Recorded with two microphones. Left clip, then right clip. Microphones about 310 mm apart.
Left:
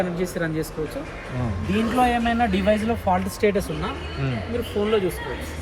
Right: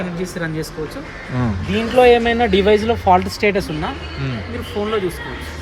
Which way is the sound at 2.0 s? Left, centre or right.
Right.